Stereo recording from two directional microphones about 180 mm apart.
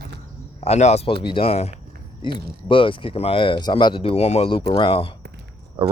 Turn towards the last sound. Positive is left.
turn(degrees=-30)  # may be behind; listen again after turning